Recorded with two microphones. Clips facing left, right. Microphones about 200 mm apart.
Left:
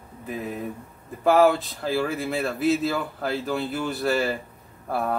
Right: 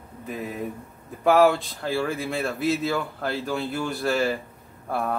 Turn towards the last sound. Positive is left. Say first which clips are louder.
# left 1 dB
turn(degrees=0)  # may be behind; listen again after turning